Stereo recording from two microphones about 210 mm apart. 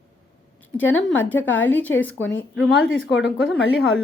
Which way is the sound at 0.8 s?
10° left (ahead or behind).